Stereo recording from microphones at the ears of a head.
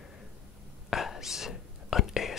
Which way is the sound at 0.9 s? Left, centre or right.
Left.